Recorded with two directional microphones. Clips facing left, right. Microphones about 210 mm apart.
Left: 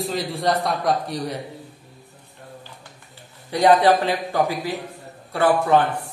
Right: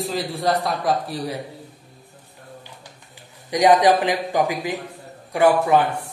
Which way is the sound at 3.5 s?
15° right (ahead or behind).